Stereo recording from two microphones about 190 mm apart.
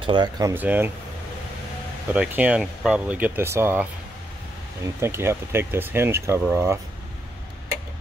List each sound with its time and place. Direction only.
0.0 s speech: 25° right (ahead or behind)
2.0 s speech: 5° right (ahead or behind)
5.0 s speech: 15° right (ahead or behind)